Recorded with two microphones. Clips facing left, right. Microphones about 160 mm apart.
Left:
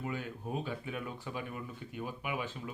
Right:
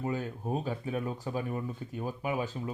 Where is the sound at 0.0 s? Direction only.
40° right (ahead or behind).